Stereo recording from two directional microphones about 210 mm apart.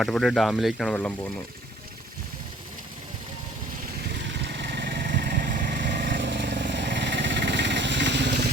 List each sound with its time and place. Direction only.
0.0 s speech: centre (ahead or behind)
4.4 s vehicle: 55° right (ahead or behind)